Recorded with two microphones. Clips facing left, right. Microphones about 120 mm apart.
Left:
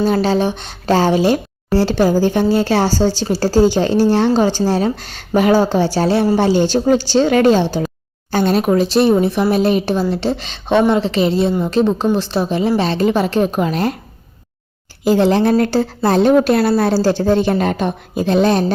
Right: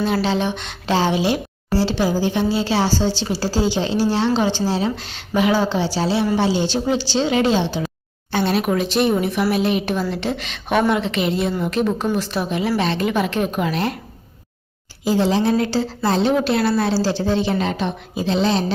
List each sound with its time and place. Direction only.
0.0 s speech: 45° left (ahead or behind)
15.0 s a woman's voice: 60° left (ahead or behind)